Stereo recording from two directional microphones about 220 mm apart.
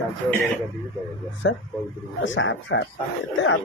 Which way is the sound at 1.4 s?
60° left (ahead or behind).